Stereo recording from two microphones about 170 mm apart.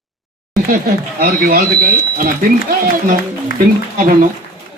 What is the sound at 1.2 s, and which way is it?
Speech, 65° right (ahead or behind).